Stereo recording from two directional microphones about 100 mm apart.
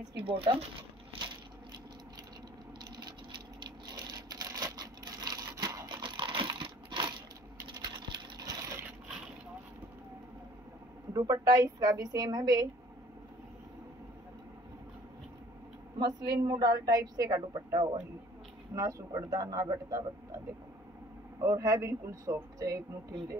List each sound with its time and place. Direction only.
0.2 s speech: 65° right (ahead or behind)
2.8 s a sound: 45° right (ahead or behind)
11.1 s a woman's voice: 35° right (ahead or behind)
16.0 s a woman's voice: 45° right (ahead or behind)
21.4 s a woman's voice: 35° right (ahead or behind)